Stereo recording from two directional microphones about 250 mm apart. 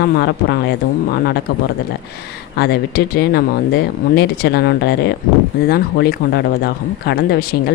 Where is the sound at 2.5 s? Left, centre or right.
Left.